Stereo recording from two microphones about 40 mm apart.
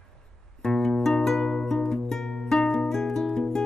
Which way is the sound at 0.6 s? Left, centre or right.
Centre.